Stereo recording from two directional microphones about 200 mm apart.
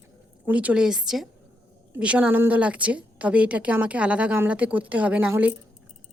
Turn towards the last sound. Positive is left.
turn(degrees=-5)  # may be behind; listen again after turning